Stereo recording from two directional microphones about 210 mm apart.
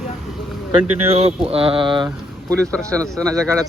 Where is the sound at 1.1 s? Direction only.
30° right (ahead or behind).